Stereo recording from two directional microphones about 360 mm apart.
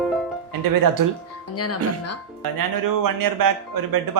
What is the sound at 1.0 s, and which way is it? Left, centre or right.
Speech, right.